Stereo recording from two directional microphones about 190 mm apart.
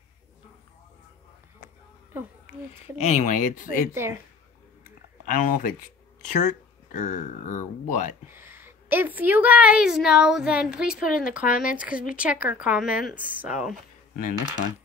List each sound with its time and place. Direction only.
3.0 s speech: 40° left (ahead or behind)
3.9 s speech: 15° right (ahead or behind)
5.2 s speech: 45° left (ahead or behind)
8.3 s a woman's voice: 10° right (ahead or behind)